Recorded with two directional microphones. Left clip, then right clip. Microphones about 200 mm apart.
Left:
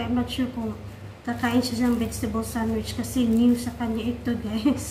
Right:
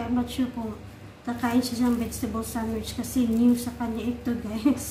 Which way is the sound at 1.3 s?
10° right (ahead or behind).